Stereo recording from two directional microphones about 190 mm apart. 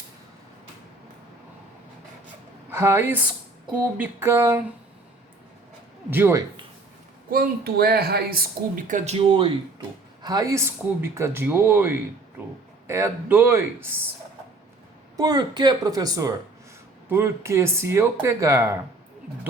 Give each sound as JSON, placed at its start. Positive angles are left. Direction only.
{"t": 2.6, "sound": "speech", "side_deg": -15}
{"t": 6.1, "sound": "speech", "side_deg": -10}
{"t": 7.3, "sound": "speech", "side_deg": -55}
{"t": 15.2, "sound": "speech", "side_deg": -20}